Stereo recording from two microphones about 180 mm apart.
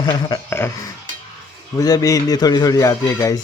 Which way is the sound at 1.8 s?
20° left (ahead or behind).